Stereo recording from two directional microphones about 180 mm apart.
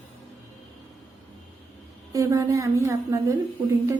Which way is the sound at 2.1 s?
20° right (ahead or behind).